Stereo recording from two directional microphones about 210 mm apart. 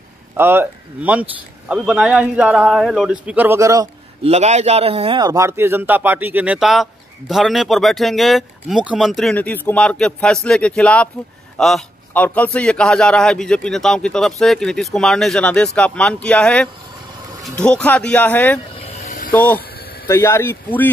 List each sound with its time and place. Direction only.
0.4 s a man's voice: 10° right (ahead or behind)
4.2 s a man's voice: 30° right (ahead or behind); by 18.6 s 10° left (ahead or behind)
19.0 s a sound: 40° left (ahead or behind)
19.3 s speech: 10° left (ahead or behind)